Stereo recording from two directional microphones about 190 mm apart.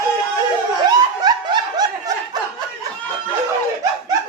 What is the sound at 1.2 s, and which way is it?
Snicker, 20° right (ahead or behind).